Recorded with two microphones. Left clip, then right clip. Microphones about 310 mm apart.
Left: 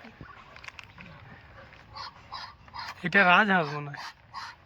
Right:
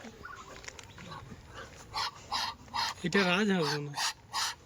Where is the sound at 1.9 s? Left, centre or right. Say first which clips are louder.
Right 6 dB; right.